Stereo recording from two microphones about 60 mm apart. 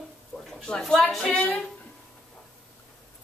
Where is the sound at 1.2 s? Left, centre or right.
Centre.